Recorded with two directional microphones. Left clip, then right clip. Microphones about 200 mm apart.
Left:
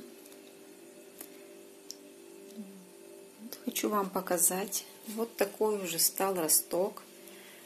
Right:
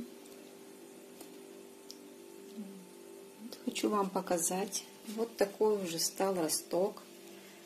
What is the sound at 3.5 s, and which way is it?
Speech, centre (ahead or behind).